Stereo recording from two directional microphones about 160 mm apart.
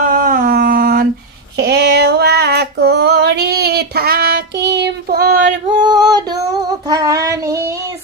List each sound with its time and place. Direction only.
0.0 s a sound: 65° right (ahead or behind)
1.6 s female singing: 90° right
5.8 s female singing: 25° right (ahead or behind)
6.4 s child singing: 20° right (ahead or behind)